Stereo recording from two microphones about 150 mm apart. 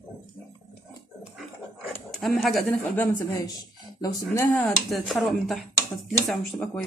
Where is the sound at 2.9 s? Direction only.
20° left (ahead or behind).